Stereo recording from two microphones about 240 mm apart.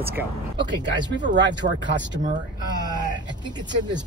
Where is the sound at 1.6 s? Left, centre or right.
Right.